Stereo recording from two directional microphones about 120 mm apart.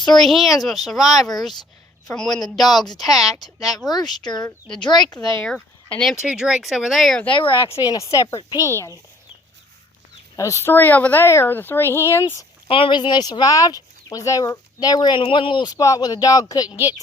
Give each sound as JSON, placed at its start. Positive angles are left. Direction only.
{"t": 0.0, "sound": "speech", "side_deg": 5}
{"t": 4.3, "sound": "speech", "side_deg": 35}
{"t": 5.2, "sound": "speech", "side_deg": 5}
{"t": 7.3, "sound": "speech", "side_deg": 45}
{"t": 7.7, "sound": "speech", "side_deg": 30}
{"t": 10.3, "sound": "speech", "side_deg": 25}
{"t": 12.6, "sound": "speech", "side_deg": 50}
{"t": 16.6, "sound": "speech", "side_deg": -15}